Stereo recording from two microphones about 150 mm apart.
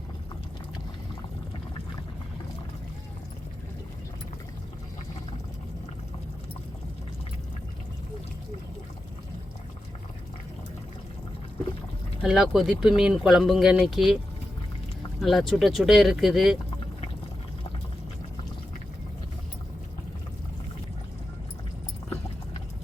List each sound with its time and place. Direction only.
12.2 s speech: 5° right (ahead or behind)
15.2 s speech: centre (ahead or behind)